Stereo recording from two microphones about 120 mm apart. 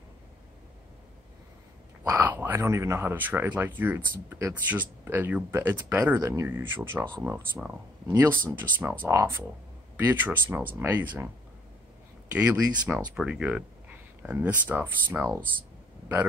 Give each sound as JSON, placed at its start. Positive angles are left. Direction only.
{"t": 2.0, "sound": "speech", "side_deg": -20}
{"t": 12.4, "sound": "speech", "side_deg": -10}